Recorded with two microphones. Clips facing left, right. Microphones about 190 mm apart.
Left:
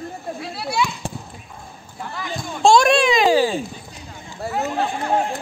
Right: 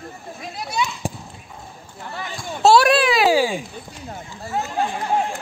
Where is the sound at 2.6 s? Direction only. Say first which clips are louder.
Even; 5° right (ahead or behind).